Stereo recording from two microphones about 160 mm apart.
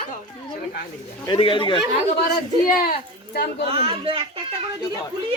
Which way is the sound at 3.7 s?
35° right (ahead or behind).